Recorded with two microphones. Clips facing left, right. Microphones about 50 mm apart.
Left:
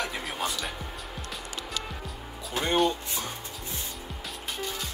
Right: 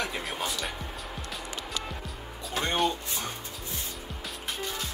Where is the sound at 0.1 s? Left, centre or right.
Centre.